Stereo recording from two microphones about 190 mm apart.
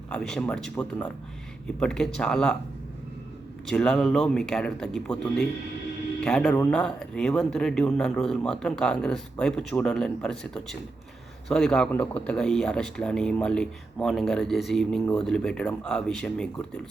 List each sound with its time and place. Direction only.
0.1 s a man's voice: 5° left (ahead or behind)
3.7 s a man's voice: 5° left (ahead or behind)